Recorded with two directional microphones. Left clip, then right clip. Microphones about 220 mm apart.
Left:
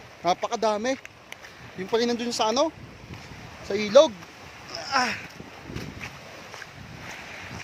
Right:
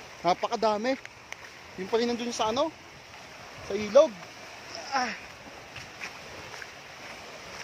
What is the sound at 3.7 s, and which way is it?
Speech, 35° left (ahead or behind).